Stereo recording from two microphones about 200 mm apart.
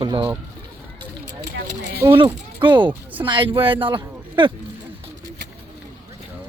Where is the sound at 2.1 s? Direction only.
25° right (ahead or behind).